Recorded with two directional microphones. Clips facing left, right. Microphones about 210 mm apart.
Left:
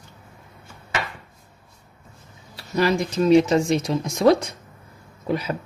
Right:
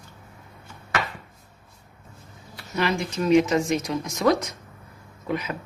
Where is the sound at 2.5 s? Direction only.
35° left (ahead or behind).